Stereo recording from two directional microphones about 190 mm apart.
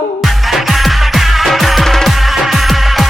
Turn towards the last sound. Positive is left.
turn(degrees=0)  # may be behind; listen again after turning